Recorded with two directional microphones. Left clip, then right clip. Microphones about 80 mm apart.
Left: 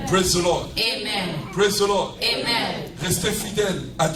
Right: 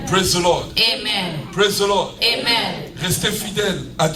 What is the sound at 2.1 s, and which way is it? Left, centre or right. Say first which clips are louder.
Speech: right 5 dB; right.